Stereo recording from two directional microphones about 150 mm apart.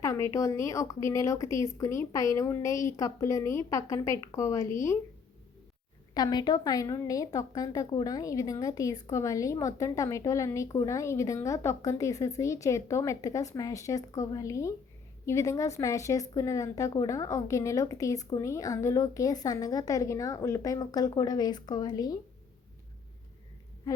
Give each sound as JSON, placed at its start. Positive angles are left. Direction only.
{"t": 0.0, "sound": "a woman's voice", "side_deg": 20}
{"t": 6.1, "sound": "a woman's voice", "side_deg": 25}
{"t": 23.9, "sound": "a sound", "side_deg": 25}